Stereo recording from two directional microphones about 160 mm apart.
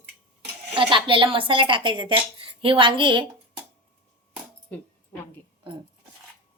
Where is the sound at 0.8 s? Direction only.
30° right (ahead or behind).